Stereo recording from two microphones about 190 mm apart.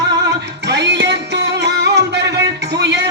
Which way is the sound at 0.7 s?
65° right (ahead or behind).